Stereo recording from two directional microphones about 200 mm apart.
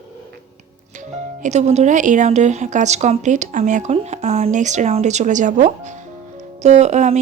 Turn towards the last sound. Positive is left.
turn(degrees=-35)  # may be behind; listen again after turning